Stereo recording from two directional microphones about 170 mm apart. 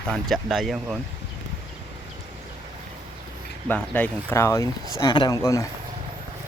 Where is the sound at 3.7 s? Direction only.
10° left (ahead or behind).